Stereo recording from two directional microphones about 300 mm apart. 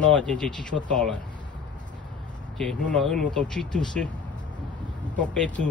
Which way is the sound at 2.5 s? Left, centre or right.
Centre.